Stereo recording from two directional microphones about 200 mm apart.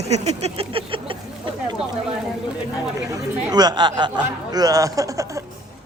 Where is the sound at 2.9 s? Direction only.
15° right (ahead or behind).